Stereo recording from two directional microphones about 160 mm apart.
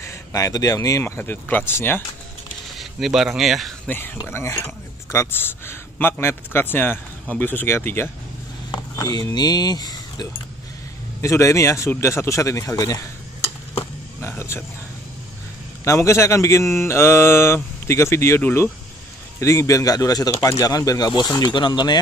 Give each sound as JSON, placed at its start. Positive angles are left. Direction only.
{"t": 0.0, "sound": "a man's voice", "side_deg": 20}
{"t": 2.8, "sound": "speech", "side_deg": 0}
{"t": 3.9, "sound": "a man's voice", "side_deg": 10}
{"t": 8.7, "sound": "speech", "side_deg": 25}
{"t": 14.2, "sound": "speech", "side_deg": 15}
{"t": 15.8, "sound": "a man's voice", "side_deg": 20}